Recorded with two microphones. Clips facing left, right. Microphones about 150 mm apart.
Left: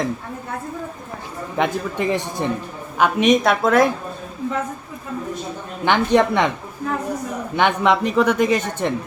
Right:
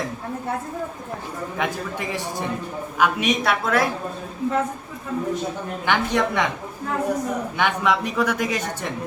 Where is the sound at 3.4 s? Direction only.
50° left (ahead or behind).